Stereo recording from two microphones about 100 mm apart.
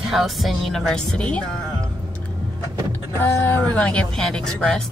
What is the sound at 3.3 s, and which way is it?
Speech, 25° left (ahead or behind).